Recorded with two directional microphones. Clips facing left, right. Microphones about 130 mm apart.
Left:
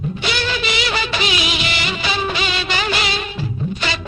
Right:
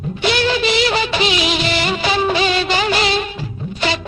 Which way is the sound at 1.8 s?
40° right (ahead or behind).